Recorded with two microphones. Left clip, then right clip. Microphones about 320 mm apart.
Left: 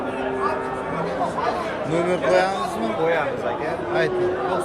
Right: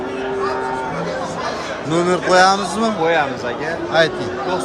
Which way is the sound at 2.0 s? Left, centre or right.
Centre.